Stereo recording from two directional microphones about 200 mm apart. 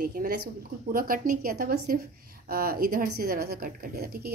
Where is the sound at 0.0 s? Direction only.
45° right (ahead or behind).